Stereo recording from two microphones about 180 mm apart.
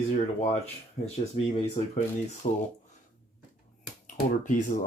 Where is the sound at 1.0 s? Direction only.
35° left (ahead or behind).